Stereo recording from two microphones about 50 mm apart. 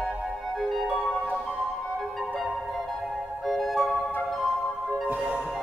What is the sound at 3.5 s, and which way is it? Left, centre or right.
Music, centre.